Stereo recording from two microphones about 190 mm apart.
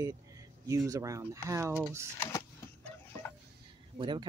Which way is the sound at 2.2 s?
15° left (ahead or behind).